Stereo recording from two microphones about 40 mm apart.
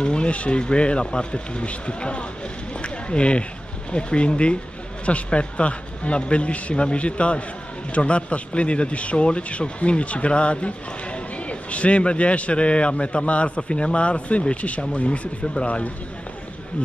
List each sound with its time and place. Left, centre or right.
0.0 s a man's voice: left
2.8 s a sound: left
3.9 s a man's voice: left